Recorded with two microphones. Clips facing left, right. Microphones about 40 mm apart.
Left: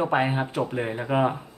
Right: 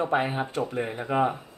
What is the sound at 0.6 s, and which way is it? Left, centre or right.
Speech, centre.